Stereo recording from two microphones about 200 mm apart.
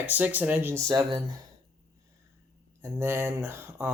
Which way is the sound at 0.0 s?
10° right (ahead or behind).